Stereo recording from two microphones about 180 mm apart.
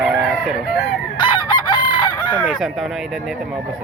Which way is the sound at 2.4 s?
5° left (ahead or behind).